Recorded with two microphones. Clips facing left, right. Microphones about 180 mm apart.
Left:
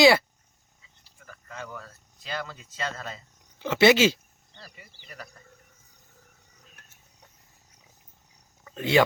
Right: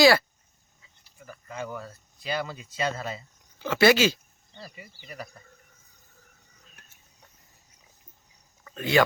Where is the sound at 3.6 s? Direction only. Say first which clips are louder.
Left 1 dB; 25° left (ahead or behind).